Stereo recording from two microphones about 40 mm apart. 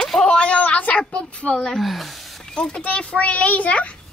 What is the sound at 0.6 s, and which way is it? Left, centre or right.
A woman's voice, left.